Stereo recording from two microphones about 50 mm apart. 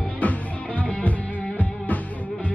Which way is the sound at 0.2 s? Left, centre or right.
Left.